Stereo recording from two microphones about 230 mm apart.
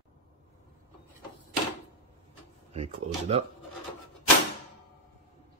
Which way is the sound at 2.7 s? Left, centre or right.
Right.